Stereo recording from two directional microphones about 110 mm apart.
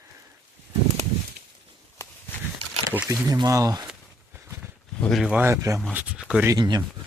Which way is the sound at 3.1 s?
30° right (ahead or behind).